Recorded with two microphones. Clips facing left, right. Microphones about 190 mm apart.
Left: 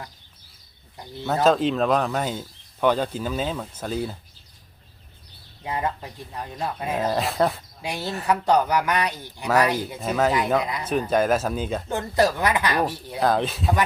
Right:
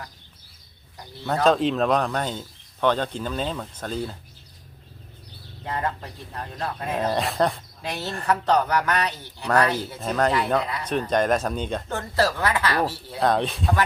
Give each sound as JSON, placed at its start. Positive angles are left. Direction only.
{"t": 1.5, "sound": "speech", "side_deg": 0}
{"t": 5.6, "sound": "speech", "side_deg": 10}
{"t": 10.3, "sound": "speech", "side_deg": 15}
{"t": 11.9, "sound": "speech", "side_deg": 15}
{"t": 13.2, "sound": "speech", "side_deg": 0}